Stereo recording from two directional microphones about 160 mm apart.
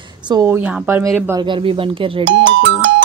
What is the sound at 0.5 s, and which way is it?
Speech, 10° right (ahead or behind).